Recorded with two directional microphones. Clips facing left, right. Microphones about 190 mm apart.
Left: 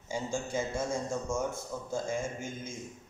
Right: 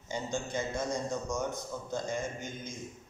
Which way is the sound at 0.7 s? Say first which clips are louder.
Left 1 dB; 25° left (ahead or behind).